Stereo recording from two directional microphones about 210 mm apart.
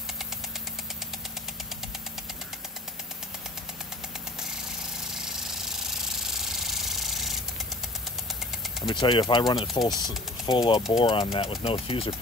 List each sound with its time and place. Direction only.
5.1 s jackhammer: centre (ahead or behind)
8.8 s speech: 20° left (ahead or behind)